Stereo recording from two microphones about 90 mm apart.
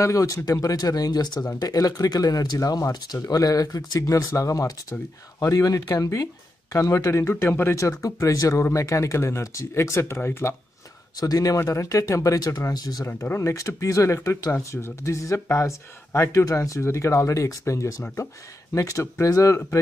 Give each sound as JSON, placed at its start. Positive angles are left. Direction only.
{"t": 0.0, "sound": "speech", "side_deg": 35}
{"t": 11.1, "sound": "speech", "side_deg": 40}
{"t": 12.7, "sound": "speech", "side_deg": 45}
{"t": 13.0, "sound": "speech", "side_deg": 30}